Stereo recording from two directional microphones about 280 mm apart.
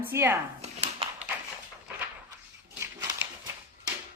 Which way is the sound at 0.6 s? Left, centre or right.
Right.